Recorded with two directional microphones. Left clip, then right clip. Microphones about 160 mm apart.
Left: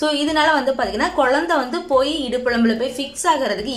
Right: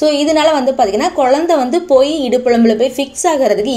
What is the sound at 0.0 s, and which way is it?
A woman's voice, 10° right (ahead or behind).